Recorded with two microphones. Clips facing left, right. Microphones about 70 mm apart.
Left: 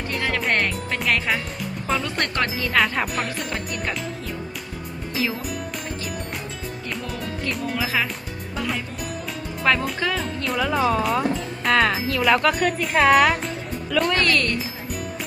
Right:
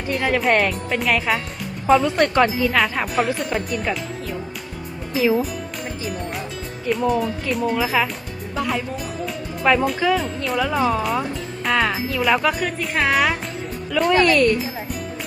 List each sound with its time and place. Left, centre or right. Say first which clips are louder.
0.3 s speech: right 5 dB; centre
5.1 s speech: right 8 dB; centre
7.1 s speech: right 7 dB; centre
8.5 s music: right 4 dB; centre
9.6 s speech: right 4 dB; centre